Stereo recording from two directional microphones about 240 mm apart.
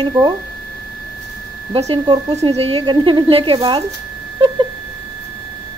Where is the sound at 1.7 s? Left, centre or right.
Right.